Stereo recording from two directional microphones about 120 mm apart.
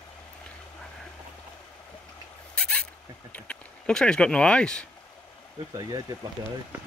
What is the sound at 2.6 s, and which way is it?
Rodents, 10° left (ahead or behind).